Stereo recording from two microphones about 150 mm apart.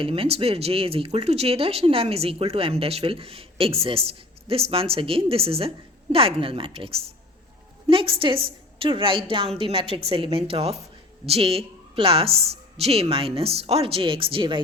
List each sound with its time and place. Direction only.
0.0 s speech: 40° right (ahead or behind)